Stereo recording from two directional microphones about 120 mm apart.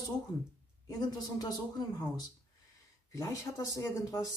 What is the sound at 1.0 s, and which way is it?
Speech, 35° left (ahead or behind).